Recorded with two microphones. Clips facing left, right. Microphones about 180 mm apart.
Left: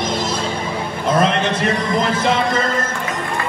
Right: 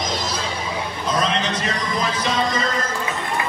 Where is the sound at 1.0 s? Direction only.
60° left (ahead or behind).